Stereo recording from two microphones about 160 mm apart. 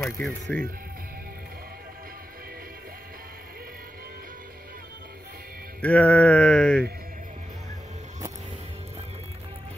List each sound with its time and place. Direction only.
0.0 s speech: 5° left (ahead or behind)
5.8 s music: 10° left (ahead or behind)